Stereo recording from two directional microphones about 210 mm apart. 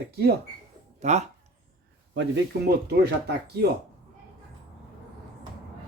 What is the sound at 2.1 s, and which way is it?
Speech, 50° right (ahead or behind).